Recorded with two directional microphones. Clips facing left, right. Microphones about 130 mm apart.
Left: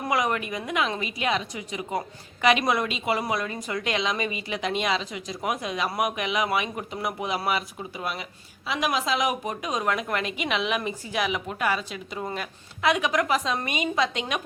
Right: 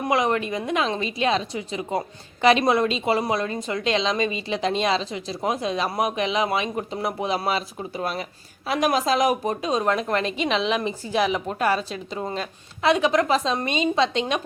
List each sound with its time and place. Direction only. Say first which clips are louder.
0.1 s a woman's voice: right 4 dB; 25° right (ahead or behind)